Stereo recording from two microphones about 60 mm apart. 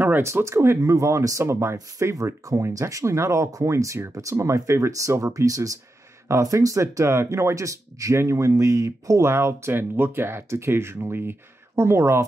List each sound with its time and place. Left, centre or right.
0.2 s speech: right
1.4 s speech: right
2.1 s speech: right
9.2 s speech: right